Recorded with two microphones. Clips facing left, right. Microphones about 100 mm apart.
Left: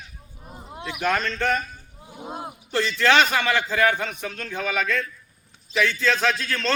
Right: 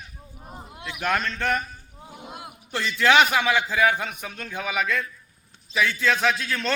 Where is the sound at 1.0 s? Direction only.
5° right (ahead or behind).